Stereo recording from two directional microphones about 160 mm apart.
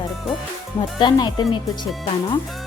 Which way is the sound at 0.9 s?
25° left (ahead or behind).